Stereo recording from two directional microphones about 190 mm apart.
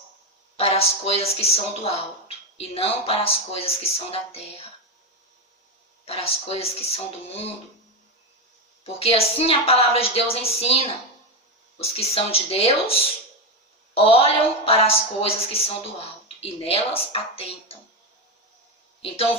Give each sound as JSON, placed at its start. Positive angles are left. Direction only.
{"t": 0.5, "sound": "speech", "side_deg": 30}
{"t": 6.1, "sound": "speech", "side_deg": 30}
{"t": 8.8, "sound": "speech", "side_deg": 30}
{"t": 19.0, "sound": "speech", "side_deg": 30}